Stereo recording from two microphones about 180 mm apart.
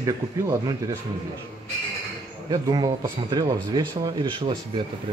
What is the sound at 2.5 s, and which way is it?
A man's voice, 20° right (ahead or behind).